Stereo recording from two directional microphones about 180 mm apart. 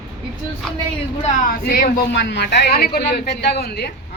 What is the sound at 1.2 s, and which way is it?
A woman's voice, 50° left (ahead or behind).